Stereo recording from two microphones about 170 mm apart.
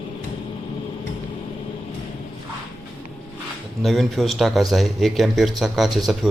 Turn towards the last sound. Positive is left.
turn(degrees=0)  # may be behind; listen again after turning